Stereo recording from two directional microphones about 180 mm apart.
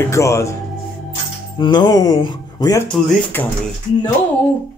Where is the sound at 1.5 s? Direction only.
25° left (ahead or behind).